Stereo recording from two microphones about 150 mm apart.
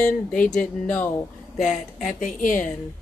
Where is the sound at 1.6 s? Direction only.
55° left (ahead or behind).